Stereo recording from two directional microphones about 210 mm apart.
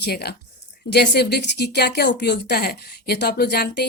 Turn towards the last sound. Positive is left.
turn(degrees=50)  # may be behind; listen again after turning